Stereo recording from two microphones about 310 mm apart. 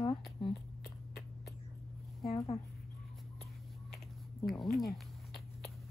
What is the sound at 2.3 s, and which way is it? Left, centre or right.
Speech, centre.